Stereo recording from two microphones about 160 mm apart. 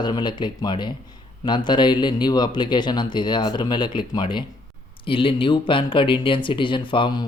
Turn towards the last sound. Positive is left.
turn(degrees=30)  # may be behind; listen again after turning